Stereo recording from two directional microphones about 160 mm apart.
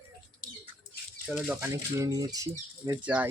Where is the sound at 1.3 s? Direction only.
5° right (ahead or behind).